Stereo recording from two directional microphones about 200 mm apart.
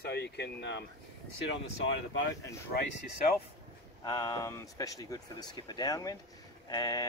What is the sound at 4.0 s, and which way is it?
Speech, 20° left (ahead or behind).